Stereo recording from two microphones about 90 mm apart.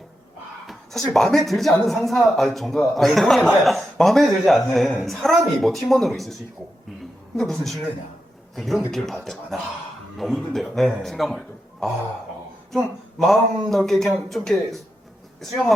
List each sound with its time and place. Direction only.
0.7 s speech: centre (ahead or behind)
7.3 s speech: 5° left (ahead or behind)